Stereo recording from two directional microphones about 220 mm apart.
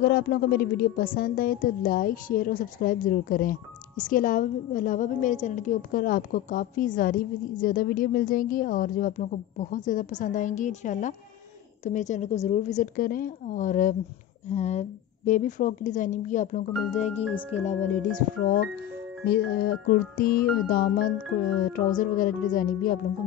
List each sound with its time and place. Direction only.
0.0 s a woman's voice: 45° left (ahead or behind); by 17.7 s 30° left (ahead or behind)
18.4 s a woman's voice: 40° left (ahead or behind)